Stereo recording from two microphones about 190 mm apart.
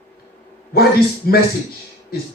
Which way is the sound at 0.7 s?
55° left (ahead or behind).